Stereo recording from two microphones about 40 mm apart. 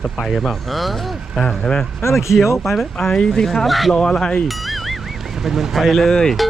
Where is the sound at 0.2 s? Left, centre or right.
Centre.